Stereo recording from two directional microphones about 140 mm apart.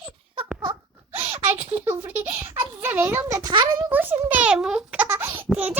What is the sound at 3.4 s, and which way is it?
Speech, 30° right (ahead or behind).